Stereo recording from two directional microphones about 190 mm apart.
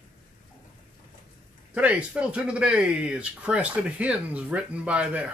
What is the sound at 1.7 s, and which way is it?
Speech, 5° right (ahead or behind).